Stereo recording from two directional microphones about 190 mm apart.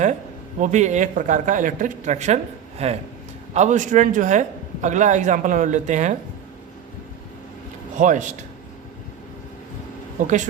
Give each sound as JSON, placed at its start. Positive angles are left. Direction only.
{"t": 0.6, "sound": "a man's voice", "side_deg": -40}
{"t": 7.9, "sound": "a man's voice", "side_deg": -40}
{"t": 10.2, "sound": "a man's voice", "side_deg": -40}